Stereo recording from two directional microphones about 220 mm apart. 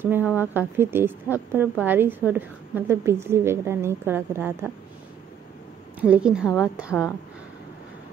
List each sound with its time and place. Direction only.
0.0 s a woman's voice: 10° right (ahead or behind)
5.9 s a woman's voice: 5° right (ahead or behind)